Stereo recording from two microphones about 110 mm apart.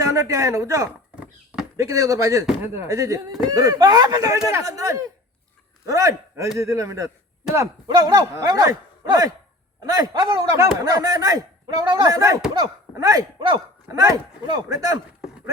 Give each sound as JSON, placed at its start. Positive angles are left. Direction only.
{"t": 0.0, "sound": "speech", "side_deg": -30}
{"t": 1.1, "sound": "a sound", "side_deg": -10}
{"t": 1.7, "sound": "a man's voice", "side_deg": -30}